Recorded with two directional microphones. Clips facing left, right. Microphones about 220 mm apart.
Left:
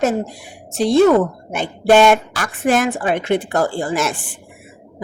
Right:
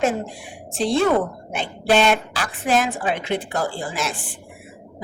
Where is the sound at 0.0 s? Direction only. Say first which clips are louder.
Left 3 dB; 40° left (ahead or behind).